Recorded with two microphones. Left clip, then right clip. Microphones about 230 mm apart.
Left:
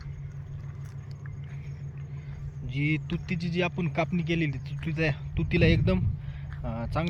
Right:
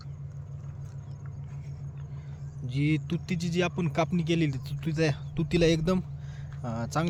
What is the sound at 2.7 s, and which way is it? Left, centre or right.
Speech, right.